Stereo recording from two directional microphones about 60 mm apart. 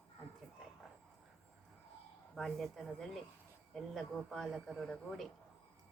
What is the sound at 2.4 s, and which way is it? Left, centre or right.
Speech, centre.